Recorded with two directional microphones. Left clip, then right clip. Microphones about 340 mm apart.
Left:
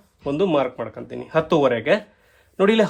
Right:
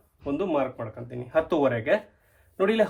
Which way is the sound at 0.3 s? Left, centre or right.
Centre.